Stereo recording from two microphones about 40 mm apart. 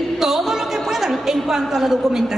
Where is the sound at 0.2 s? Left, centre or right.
Centre.